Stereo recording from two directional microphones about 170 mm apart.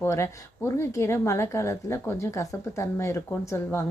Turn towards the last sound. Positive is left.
turn(degrees=15)  # may be behind; listen again after turning